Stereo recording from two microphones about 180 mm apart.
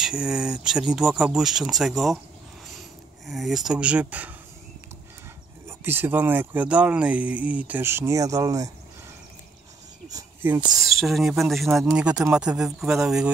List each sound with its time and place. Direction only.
0.0 s speech: 5° right (ahead or behind)
3.3 s speech: centre (ahead or behind)
5.7 s speech: 10° right (ahead or behind)
10.0 s speech: 15° right (ahead or behind)
10.8 s speech: centre (ahead or behind)